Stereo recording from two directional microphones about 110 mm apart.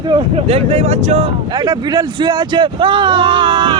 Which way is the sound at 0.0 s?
45° right (ahead or behind).